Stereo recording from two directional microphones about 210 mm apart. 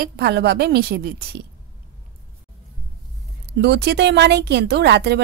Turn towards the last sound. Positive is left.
turn(degrees=-55)  # may be behind; listen again after turning